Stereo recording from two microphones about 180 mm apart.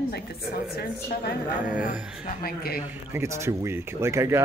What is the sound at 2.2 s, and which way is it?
Speech, 55° left (ahead or behind).